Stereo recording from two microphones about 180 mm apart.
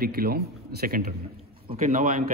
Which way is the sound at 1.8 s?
35° right (ahead or behind).